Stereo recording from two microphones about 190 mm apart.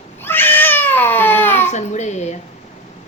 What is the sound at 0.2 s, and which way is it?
Cat, 10° left (ahead or behind).